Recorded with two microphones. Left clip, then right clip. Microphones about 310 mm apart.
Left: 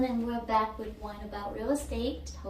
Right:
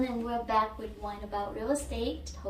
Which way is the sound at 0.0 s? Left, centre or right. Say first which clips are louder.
Even; centre.